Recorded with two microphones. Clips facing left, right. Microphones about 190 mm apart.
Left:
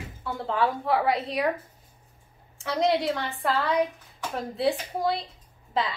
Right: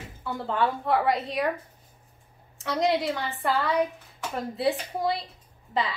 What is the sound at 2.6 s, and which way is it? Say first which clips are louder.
A woman's voice: left 1 dB; centre (ahead or behind).